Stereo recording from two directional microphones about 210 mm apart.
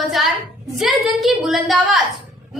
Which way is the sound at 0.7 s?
Centre (ahead or behind).